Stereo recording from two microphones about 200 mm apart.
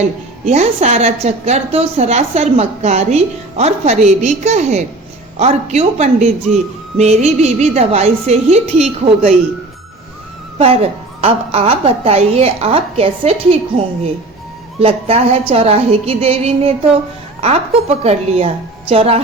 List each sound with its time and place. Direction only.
0.4 s a woman's voice: 35° right (ahead or behind)
11.2 s a woman's voice: 30° right (ahead or behind)